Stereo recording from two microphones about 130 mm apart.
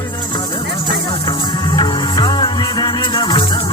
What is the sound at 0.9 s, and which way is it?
Music, 35° left (ahead or behind).